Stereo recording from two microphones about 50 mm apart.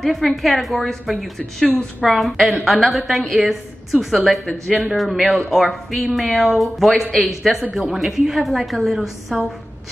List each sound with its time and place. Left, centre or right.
0.0 s a woman's voice: centre